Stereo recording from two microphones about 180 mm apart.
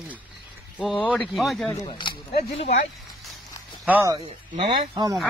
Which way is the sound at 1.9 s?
30° left (ahead or behind).